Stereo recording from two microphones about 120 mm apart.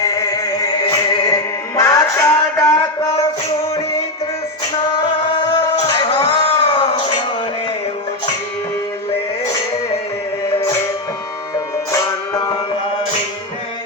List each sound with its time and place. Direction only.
0.0 s music: 30° left (ahead or behind)
4.9 s music: 35° left (ahead or behind)
11.5 s music: 25° left (ahead or behind)